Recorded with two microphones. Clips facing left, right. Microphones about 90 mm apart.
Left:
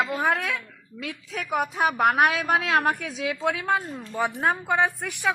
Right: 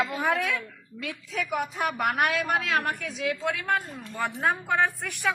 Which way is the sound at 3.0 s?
Centre (ahead or behind).